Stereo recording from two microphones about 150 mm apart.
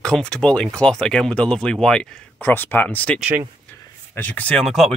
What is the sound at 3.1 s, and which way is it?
Speech, 10° right (ahead or behind).